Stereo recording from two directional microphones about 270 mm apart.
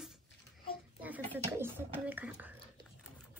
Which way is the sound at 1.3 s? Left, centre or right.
Centre.